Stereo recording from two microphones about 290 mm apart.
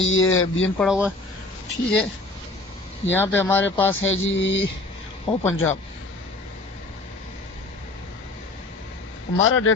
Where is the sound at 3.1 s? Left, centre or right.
Centre.